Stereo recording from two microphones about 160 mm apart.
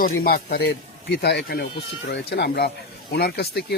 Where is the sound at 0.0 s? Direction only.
70° left (ahead or behind).